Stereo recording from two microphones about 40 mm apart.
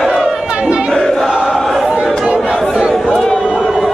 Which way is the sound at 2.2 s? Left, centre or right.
Right.